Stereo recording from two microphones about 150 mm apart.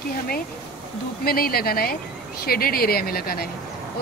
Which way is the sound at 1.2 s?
90° left.